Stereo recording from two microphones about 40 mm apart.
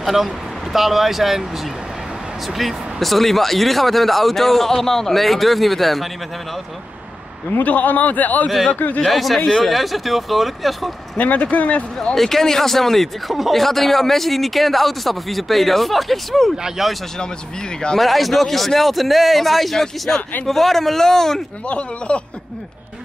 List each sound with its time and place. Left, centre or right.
0.0 s a man's voice: centre
2.4 s a man's voice: centre
7.5 s a man's voice: left
9.0 s a man's voice: centre
11.1 s a man's voice: left
12.2 s a man's voice: centre
16.6 s speech: centre
17.9 s a man's voice: centre
20.1 s speech: left
20.4 s speech: centre
21.6 s speech: left